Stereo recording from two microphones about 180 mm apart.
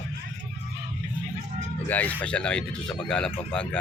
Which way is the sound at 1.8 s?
10° left (ahead or behind).